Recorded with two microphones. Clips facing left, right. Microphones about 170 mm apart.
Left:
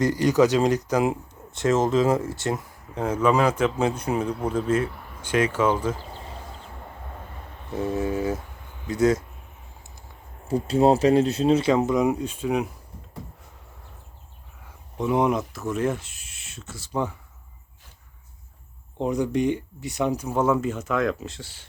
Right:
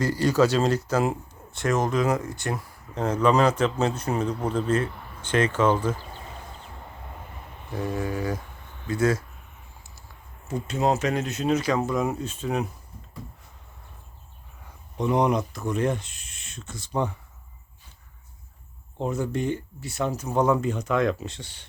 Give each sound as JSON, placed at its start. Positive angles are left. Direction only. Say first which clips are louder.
{"t": 0.0, "sound": "speech", "louder": "left 2 dB", "side_deg": 15}
{"t": 2.9, "sound": "speech", "louder": "even", "side_deg": 10}
{"t": 7.9, "sound": "speech", "louder": "left 4 dB", "side_deg": 20}
{"t": 10.5, "sound": "speech", "louder": "left 6 dB", "side_deg": 30}
{"t": 14.9, "sound": "speech", "louder": "even", "side_deg": 5}
{"t": 18.9, "sound": "speech", "louder": "left 4 dB", "side_deg": 15}